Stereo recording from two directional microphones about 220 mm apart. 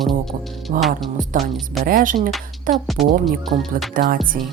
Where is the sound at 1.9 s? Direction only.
40° right (ahead or behind).